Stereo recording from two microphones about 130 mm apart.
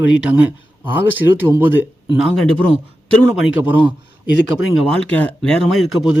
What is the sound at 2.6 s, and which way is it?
Speech, 45° right (ahead or behind).